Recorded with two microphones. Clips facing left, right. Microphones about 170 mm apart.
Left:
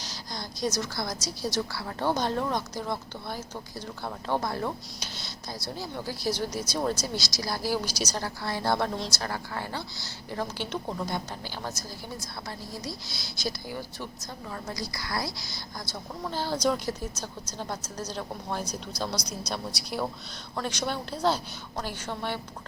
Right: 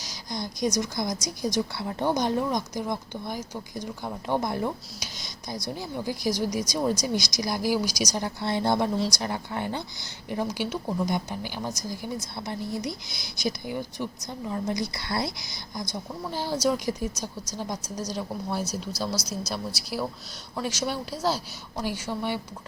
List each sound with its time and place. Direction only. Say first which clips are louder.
0.0 s a woman's voice: right 4 dB; 15° right (ahead or behind)